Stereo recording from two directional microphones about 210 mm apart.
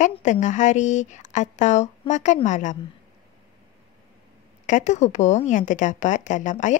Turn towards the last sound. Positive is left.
turn(degrees=35)  # may be behind; listen again after turning